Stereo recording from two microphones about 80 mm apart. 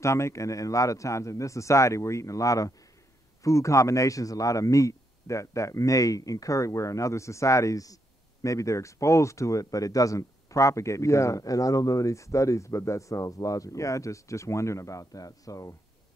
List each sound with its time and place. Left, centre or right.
0.0 s a man's voice: left